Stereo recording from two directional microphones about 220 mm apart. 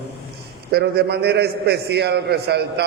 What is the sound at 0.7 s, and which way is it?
A man's voice, 45° right (ahead or behind).